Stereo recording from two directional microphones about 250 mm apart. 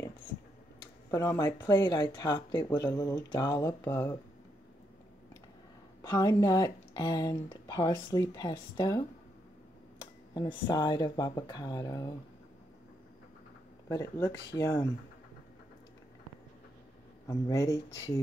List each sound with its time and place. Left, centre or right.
1.1 s speech: centre
6.0 s speech: centre
10.3 s speech: centre
13.8 s speech: centre
17.3 s speech: centre